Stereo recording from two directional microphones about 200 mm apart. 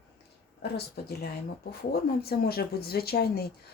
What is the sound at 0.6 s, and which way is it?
Speech, 50° left (ahead or behind).